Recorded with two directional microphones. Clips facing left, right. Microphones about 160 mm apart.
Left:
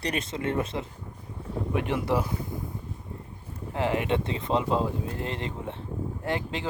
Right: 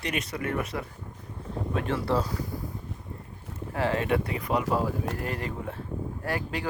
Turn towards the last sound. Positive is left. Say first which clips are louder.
# left 1 dB
turn(degrees=20)  # may be behind; listen again after turning